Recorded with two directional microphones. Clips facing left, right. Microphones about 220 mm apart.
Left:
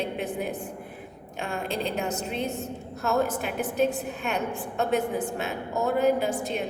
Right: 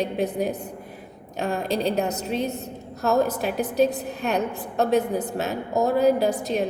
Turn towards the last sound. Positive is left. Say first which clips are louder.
# right 5 dB
turn(degrees=-40)  # may be behind; listen again after turning